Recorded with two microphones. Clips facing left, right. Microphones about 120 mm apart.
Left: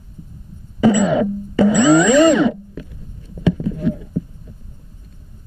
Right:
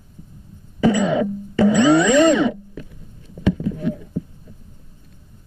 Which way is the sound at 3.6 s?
30° left (ahead or behind).